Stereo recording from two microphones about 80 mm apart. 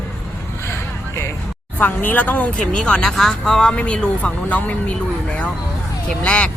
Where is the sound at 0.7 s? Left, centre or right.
Left.